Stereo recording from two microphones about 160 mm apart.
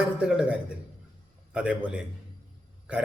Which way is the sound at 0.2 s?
5° right (ahead or behind).